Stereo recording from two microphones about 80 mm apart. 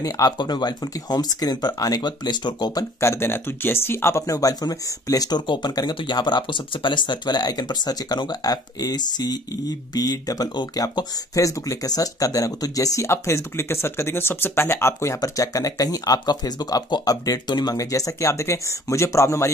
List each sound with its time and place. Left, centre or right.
0.0 s speech: left
3.0 s speech: left
4.4 s speech: left
5.5 s speech: left
11.3 s speech: left